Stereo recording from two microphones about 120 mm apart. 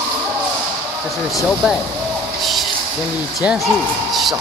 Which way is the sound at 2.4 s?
Centre (ahead or behind).